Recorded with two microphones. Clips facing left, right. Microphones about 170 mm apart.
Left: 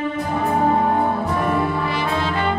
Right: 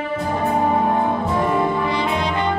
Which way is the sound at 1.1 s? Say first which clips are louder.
Right 1 dB; 20° right (ahead or behind).